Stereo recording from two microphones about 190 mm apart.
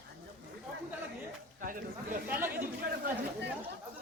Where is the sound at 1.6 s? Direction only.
45° right (ahead or behind).